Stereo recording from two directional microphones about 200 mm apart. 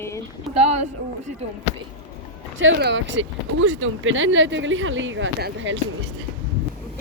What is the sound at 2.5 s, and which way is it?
Speech, 65° right (ahead or behind).